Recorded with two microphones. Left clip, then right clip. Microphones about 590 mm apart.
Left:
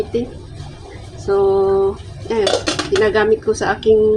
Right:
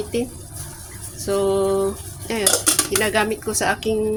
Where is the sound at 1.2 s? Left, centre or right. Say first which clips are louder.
Left 5 dB; right.